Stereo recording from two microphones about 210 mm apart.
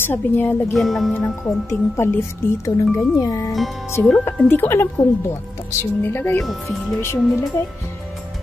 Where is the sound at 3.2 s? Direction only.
15° left (ahead or behind).